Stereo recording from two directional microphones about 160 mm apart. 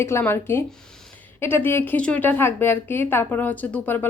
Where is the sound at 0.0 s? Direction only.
15° left (ahead or behind).